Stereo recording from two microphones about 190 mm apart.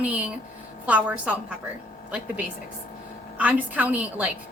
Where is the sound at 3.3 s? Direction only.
10° right (ahead or behind).